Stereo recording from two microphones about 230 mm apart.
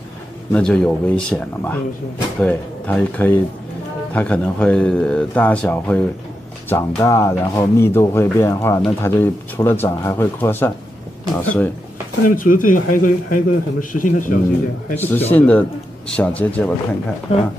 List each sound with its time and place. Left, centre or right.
0.5 s a man's voice: centre
12.4 s a man's voice: left
15.0 s a man's voice: centre